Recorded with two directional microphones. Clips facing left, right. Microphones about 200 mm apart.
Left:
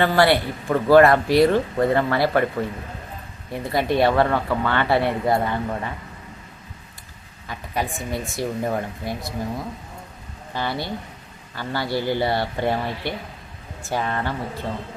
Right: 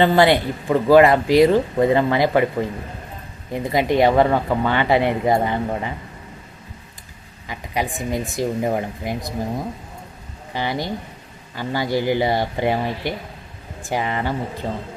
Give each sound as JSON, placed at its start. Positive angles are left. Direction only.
{"t": 0.0, "sound": "speech", "side_deg": -20}
{"t": 7.4, "sound": "a woman's voice", "side_deg": -15}
{"t": 10.5, "sound": "speech", "side_deg": -15}